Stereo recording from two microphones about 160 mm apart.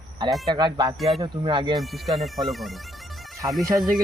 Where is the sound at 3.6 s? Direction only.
20° right (ahead or behind).